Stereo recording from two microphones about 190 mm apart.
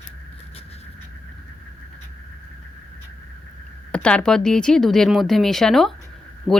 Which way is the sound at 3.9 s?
5° left (ahead or behind).